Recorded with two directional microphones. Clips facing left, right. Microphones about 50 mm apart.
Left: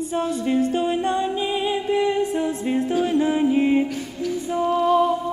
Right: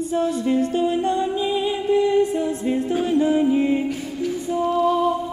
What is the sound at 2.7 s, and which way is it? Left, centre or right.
A capella, left.